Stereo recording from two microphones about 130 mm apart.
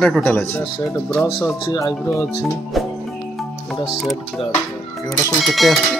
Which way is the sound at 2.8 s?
Centre (ahead or behind).